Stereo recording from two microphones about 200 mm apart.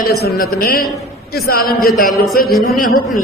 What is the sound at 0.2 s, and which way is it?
A man's voice, 50° left (ahead or behind).